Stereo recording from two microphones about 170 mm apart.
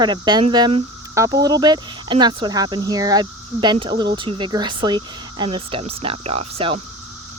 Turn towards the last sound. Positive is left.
turn(degrees=-35)  # may be behind; listen again after turning